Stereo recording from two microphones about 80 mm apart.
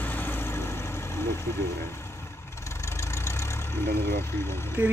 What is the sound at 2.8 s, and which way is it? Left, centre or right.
Vehicle, left.